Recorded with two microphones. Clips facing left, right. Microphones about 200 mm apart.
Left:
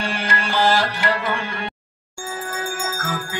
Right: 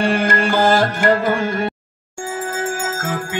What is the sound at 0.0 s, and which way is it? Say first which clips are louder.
Music: right 8 dB; 50° right (ahead or behind).